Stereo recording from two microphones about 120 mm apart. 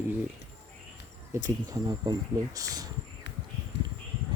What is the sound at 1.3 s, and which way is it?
Speech, 30° right (ahead or behind).